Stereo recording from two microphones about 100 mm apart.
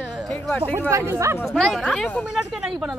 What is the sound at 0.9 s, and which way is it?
Speech, 30° right (ahead or behind).